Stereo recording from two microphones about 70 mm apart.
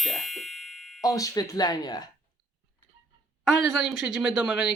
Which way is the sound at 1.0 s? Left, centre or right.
Left.